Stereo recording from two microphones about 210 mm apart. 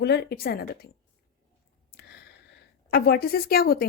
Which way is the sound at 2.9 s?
50° left (ahead or behind).